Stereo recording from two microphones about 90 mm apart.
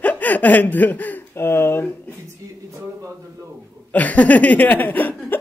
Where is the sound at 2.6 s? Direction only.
35° right (ahead or behind).